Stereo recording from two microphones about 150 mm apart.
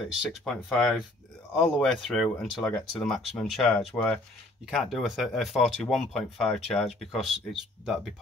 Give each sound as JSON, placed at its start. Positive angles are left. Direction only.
{"t": 0.0, "sound": "speech", "side_deg": 0}